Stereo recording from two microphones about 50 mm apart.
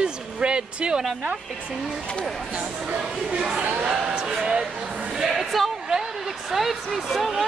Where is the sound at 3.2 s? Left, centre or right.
Centre.